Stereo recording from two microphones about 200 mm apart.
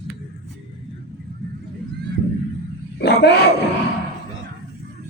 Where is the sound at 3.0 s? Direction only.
55° left (ahead or behind).